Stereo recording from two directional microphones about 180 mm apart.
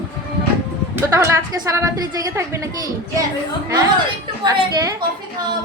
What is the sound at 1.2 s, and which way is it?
Speech, 15° right (ahead or behind).